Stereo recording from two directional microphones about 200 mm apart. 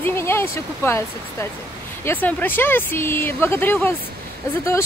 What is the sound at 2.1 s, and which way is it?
Speech, 10° left (ahead or behind).